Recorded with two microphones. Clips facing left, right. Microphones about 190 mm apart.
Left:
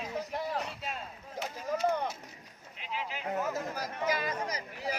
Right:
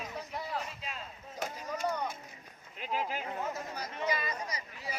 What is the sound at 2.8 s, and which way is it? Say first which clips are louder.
Speech: right 4 dB; 45° right (ahead or behind).